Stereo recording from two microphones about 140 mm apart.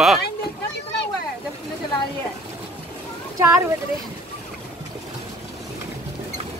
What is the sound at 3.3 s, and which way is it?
Speech, 20° right (ahead or behind).